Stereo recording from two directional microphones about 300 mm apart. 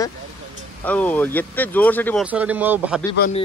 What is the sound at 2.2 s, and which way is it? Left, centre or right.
Speech, centre.